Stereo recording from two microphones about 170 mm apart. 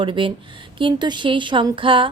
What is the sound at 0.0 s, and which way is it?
Speech, 30° right (ahead or behind).